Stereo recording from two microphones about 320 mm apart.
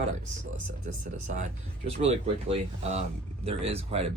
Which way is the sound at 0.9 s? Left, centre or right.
Right.